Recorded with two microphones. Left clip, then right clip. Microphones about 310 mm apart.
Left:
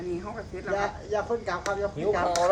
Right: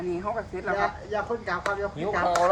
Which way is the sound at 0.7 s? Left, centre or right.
Right.